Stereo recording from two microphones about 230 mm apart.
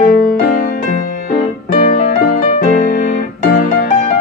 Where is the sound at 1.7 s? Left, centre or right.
Left.